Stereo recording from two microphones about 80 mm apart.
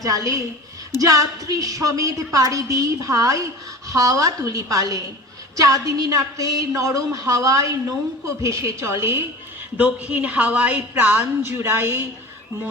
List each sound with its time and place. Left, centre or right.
0.0 s a woman's voice: right
9.7 s a woman's voice: centre